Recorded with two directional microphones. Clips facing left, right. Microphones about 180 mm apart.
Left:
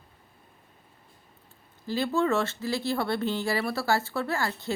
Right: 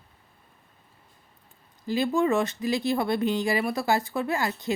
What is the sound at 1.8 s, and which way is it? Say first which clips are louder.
Speech: right 2 dB; 15° right (ahead or behind).